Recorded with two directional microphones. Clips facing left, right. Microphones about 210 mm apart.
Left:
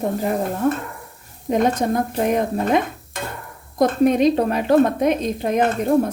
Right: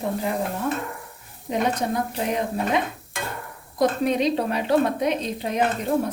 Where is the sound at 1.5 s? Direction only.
50° left (ahead or behind).